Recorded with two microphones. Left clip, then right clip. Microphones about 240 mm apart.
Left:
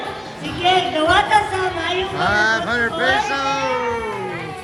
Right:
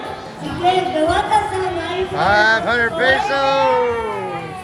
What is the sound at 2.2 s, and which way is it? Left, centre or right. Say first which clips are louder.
Music: right 4 dB; centre.